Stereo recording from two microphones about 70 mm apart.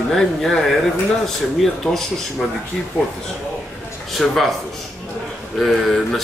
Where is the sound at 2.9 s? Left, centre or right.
Right.